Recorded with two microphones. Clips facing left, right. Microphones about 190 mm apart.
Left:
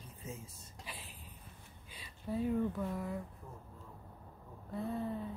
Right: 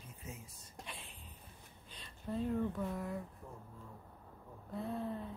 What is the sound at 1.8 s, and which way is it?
Speech, 10° left (ahead or behind).